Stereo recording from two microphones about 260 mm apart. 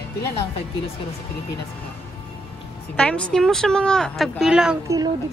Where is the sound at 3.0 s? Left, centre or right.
Centre.